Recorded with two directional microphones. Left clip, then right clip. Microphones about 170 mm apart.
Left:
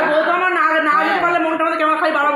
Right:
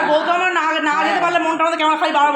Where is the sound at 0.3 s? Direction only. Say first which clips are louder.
Left 2 dB; 85° right.